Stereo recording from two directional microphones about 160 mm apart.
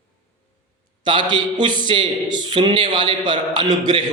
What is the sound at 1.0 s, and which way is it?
Speech, 30° right (ahead or behind).